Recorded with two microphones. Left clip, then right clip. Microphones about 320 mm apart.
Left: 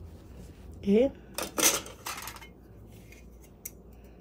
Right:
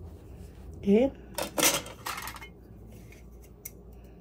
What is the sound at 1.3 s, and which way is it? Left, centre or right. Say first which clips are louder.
Dishes: right 1 dB; centre.